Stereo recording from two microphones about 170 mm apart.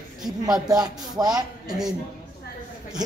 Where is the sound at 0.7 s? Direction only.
20° right (ahead or behind).